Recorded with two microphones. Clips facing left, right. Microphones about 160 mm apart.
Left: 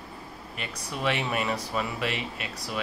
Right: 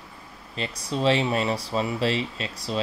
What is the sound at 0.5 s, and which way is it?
Speech, 30° right (ahead or behind).